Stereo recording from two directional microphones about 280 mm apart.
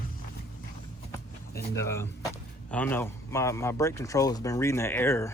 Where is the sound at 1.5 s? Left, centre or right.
Left.